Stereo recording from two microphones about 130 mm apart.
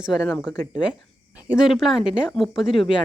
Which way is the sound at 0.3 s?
5° left (ahead or behind).